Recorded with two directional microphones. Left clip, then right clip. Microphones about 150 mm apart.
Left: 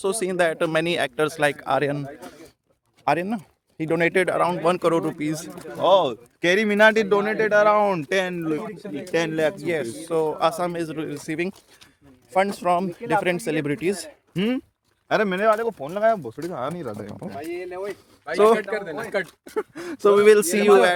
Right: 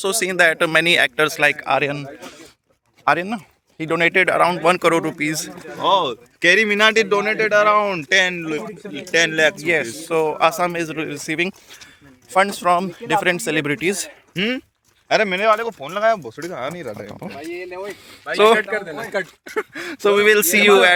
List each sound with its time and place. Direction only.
0.0 s speech: 15° left (ahead or behind)
4.3 s speech: 5° right (ahead or behind)
5.5 s speech: 45° right (ahead or behind)
5.8 s speech: 90° left; by 8.5 s 55° left (ahead or behind)
9.1 s speech: 35° left (ahead or behind)
9.6 s speech: 20° right (ahead or behind)
14.3 s speech: 55° left (ahead or behind)
15.0 s speech: 80° left
17.4 s a man's voice: 65° right (ahead or behind)
18.3 s speech: centre (ahead or behind)
18.6 s a man's voice: 55° right (ahead or behind)
19.7 s speech: 20° left (ahead or behind); by 20.9 s centre (ahead or behind)